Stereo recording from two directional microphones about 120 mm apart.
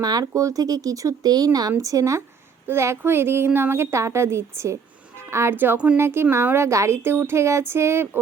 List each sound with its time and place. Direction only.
0.0 s a woman's voice: 30° right (ahead or behind)